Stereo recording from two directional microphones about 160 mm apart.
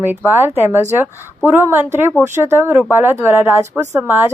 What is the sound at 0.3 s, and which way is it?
A woman's voice, 15° right (ahead or behind).